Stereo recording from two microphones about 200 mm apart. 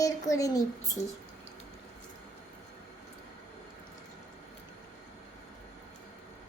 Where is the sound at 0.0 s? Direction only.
15° left (ahead or behind).